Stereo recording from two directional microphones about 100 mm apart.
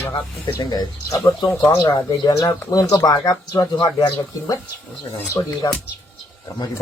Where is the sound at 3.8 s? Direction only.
50° left (ahead or behind).